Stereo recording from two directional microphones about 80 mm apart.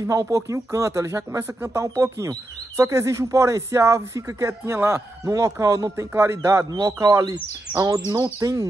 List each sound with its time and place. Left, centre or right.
0.0 s speech: right
5.4 s speech: right
6.1 s speech: right
6.7 s speech: right